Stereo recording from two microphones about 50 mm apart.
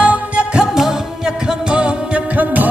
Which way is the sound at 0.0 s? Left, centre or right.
Right.